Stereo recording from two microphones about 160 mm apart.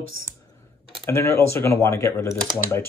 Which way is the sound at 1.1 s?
15° left (ahead or behind).